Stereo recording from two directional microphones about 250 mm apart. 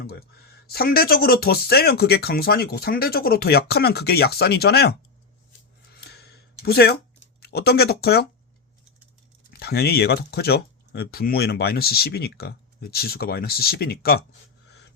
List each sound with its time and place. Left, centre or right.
0.0 s speech: left
5.9 s a sound: left
7.4 s speech: left
9.5 s speech: left